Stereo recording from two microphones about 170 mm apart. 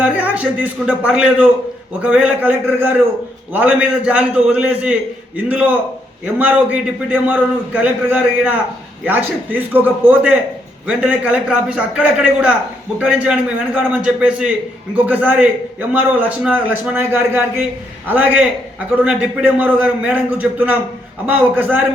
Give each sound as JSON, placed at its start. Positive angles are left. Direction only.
{"t": 0.0, "sound": "a man's voice", "side_deg": -10}